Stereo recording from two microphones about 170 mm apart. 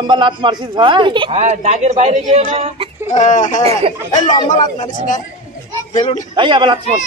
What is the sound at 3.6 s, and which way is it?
Speech, 35° right (ahead or behind).